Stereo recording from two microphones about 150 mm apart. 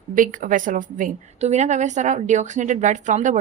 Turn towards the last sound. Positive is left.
turn(degrees=-55)  # may be behind; listen again after turning